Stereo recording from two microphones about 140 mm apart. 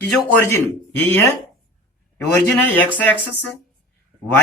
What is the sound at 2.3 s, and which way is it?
Speech, 10° left (ahead or behind).